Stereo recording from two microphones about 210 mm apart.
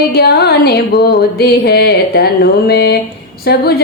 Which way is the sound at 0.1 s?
50° left (ahead or behind).